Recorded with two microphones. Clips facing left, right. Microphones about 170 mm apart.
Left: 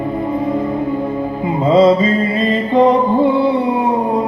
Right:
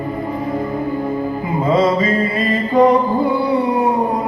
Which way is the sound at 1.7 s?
25° left (ahead or behind).